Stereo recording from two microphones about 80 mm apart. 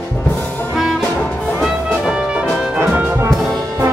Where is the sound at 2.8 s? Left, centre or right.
Right.